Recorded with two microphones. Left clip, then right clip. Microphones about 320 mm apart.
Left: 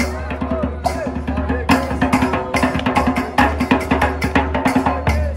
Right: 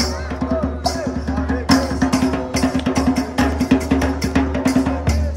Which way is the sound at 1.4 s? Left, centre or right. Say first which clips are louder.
Left 1 dB; centre.